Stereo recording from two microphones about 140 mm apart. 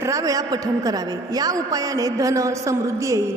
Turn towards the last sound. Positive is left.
turn(degrees=-20)  # may be behind; listen again after turning